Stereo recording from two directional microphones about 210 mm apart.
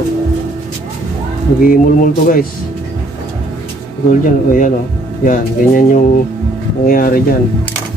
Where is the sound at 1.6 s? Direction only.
40° left (ahead or behind).